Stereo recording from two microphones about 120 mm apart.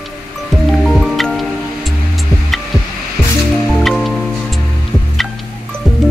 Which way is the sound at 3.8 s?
Centre (ahead or behind).